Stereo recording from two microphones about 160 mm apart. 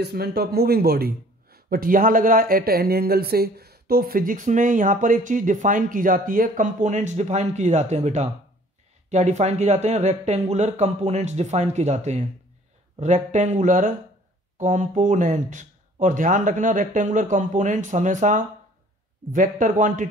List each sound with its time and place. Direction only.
0.0 s a man's voice: 85° right; by 20.1 s 55° right (ahead or behind)